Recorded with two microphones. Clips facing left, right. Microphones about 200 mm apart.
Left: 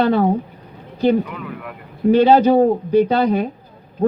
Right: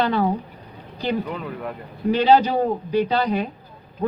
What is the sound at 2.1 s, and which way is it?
Speech, 50° left (ahead or behind).